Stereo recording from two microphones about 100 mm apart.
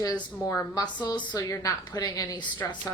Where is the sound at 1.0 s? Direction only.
45° left (ahead or behind).